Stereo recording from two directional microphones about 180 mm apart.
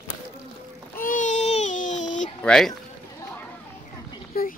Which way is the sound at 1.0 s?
45° left (ahead or behind).